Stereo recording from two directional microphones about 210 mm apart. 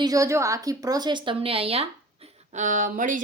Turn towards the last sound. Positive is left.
turn(degrees=-40)  # may be behind; listen again after turning